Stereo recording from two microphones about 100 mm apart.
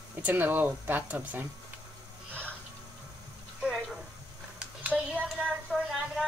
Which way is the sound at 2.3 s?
10° left (ahead or behind).